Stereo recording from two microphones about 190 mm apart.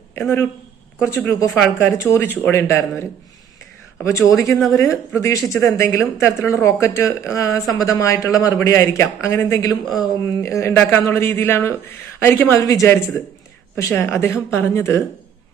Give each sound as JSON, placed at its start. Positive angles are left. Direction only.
{"t": 0.2, "sound": "speech", "side_deg": 10}
{"t": 4.0, "sound": "speech", "side_deg": 15}
{"t": 4.5, "sound": "speech", "side_deg": 0}
{"t": 5.1, "sound": "speech", "side_deg": 15}